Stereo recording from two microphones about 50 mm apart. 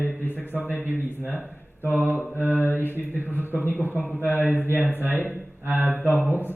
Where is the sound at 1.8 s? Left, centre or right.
Left.